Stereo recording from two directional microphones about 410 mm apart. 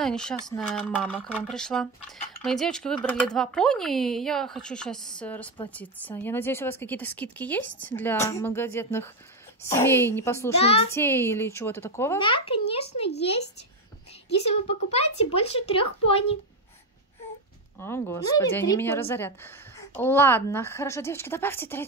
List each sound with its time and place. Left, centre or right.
0.0 s a woman's voice: centre
14.5 s a woman's voice: centre
17.7 s speech: centre